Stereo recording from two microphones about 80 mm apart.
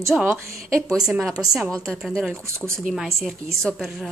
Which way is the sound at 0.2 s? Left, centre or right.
Right.